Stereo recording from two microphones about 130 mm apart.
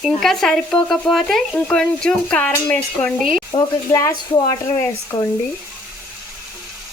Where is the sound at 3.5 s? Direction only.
25° left (ahead or behind).